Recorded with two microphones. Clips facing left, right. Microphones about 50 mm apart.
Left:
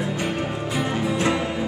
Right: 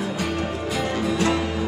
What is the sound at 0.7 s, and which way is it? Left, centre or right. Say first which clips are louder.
Music: even; left.